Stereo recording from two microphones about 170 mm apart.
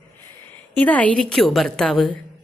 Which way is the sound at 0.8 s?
10° left (ahead or behind).